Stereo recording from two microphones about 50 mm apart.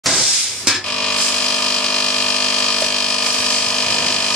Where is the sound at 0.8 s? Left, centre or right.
Centre.